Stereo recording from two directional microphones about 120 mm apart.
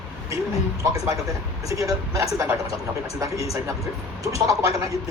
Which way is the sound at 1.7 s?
30° right (ahead or behind).